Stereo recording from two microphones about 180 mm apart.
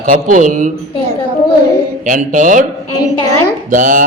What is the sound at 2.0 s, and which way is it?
Speech, 45° right (ahead or behind).